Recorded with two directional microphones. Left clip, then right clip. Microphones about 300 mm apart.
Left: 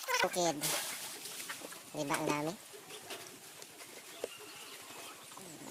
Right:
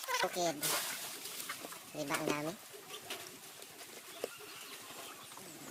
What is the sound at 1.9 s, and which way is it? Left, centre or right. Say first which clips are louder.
Speech: left 2 dB; left.